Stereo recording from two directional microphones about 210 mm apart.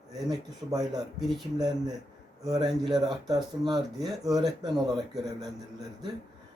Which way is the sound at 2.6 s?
Centre (ahead or behind).